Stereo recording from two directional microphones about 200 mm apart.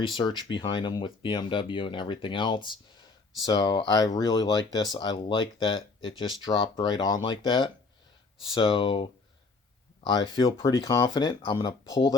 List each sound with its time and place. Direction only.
0.0 s speech: 25° left (ahead or behind)